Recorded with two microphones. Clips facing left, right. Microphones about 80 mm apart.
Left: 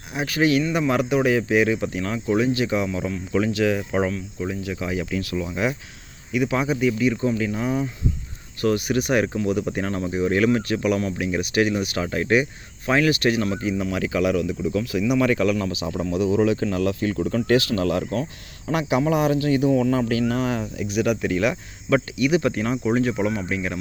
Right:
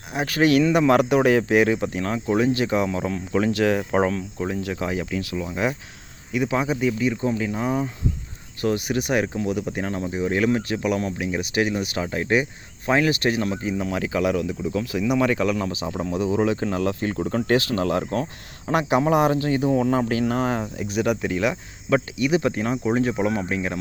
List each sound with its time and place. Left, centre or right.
0.1 s speech: right
5.1 s speech: centre
5.5 s speech: right
18.7 s speech: right